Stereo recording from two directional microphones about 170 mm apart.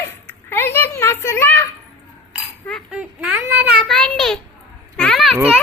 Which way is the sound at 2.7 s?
5° right (ahead or behind).